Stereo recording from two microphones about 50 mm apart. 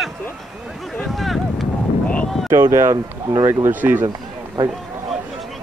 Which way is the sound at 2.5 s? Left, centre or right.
Right.